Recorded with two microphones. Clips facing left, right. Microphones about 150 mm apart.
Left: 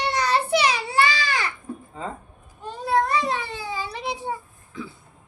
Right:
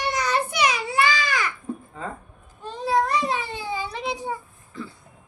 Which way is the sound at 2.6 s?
10° left (ahead or behind).